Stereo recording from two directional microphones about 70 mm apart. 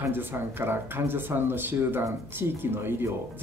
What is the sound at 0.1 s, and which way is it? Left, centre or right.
Speech, right.